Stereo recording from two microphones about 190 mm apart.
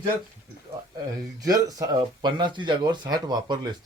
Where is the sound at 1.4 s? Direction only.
20° right (ahead or behind).